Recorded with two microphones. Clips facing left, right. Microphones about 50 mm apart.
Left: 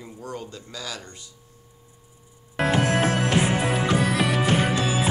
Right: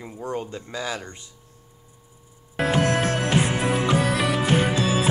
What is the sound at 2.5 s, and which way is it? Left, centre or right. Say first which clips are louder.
Music: even; centre.